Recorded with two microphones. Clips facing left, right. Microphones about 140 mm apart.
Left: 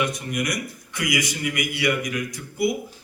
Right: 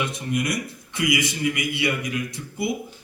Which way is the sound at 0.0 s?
25° right (ahead or behind).